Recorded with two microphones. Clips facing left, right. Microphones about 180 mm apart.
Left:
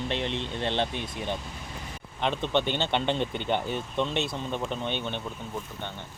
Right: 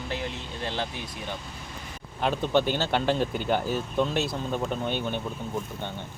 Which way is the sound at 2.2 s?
5° right (ahead or behind).